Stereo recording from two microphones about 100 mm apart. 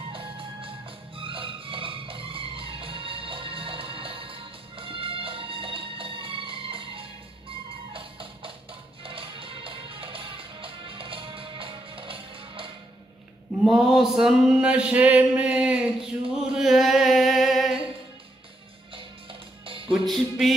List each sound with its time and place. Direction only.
0.1 s music: 60° right (ahead or behind)
13.7 s a sound: 5° right (ahead or behind)
19.9 s music: centre (ahead or behind)